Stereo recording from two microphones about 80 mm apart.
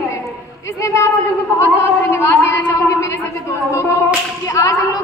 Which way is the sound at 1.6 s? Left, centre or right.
Left.